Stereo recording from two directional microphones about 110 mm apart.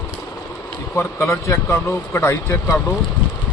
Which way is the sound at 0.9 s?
25° left (ahead or behind).